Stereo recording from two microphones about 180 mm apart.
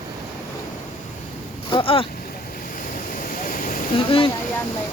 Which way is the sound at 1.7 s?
30° left (ahead or behind).